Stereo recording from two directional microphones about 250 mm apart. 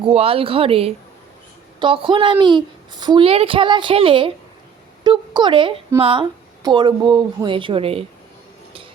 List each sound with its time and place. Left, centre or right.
0.0 s a woman's voice: right